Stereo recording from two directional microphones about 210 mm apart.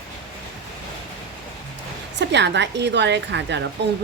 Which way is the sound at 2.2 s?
55° right (ahead or behind).